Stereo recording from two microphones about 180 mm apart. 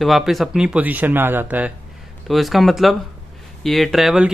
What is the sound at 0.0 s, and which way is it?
Speech, centre (ahead or behind).